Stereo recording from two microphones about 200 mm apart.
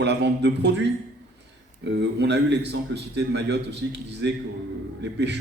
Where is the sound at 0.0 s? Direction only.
60° right (ahead or behind).